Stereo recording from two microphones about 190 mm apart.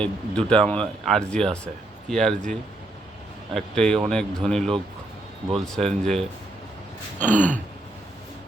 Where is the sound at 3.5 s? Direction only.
5° left (ahead or behind).